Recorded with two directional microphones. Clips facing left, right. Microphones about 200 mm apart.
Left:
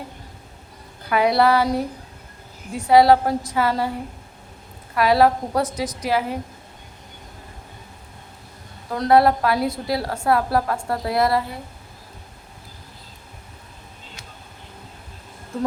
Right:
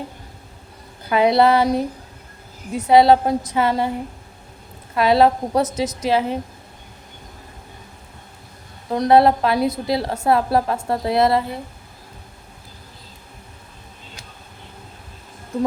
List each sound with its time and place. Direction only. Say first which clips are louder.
1.1 s a woman's voice: right 2 dB; 25° right (ahead or behind)
4.9 s a woman's voice: right 2 dB; 25° right (ahead or behind)
8.9 s a woman's voice: right 2 dB; 20° right (ahead or behind)